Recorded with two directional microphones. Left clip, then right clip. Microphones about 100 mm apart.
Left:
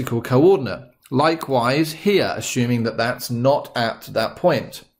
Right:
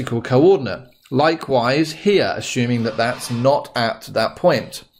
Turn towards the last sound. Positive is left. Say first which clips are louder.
# right 2 dB
turn(degrees=-45)  # may be behind; listen again after turning